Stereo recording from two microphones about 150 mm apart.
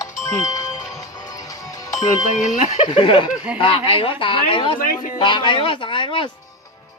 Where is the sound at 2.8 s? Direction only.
30° left (ahead or behind).